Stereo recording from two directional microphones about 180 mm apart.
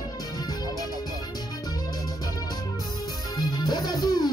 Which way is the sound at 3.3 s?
20° left (ahead or behind).